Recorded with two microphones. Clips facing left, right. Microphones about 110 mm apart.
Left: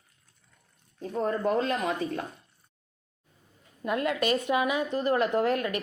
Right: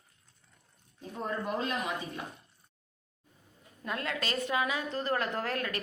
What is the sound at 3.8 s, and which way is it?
A woman's voice, 20° left (ahead or behind).